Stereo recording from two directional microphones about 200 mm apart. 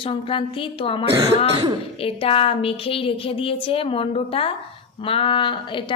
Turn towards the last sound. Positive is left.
turn(degrees=25)  # may be behind; listen again after turning